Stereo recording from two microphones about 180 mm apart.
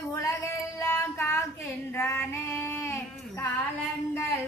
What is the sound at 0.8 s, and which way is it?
Child singing, 15° left (ahead or behind).